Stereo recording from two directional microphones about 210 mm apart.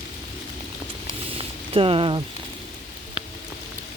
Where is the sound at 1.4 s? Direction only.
25° right (ahead or behind).